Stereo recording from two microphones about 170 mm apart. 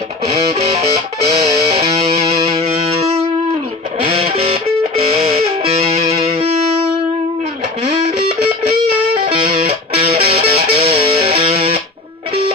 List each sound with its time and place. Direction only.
0.3 s music: 35° right (ahead or behind)
5.7 s music: 35° right (ahead or behind)
9.2 s music: 35° right (ahead or behind)